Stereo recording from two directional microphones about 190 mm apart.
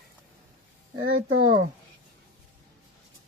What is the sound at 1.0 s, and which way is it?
Speech, 90° right.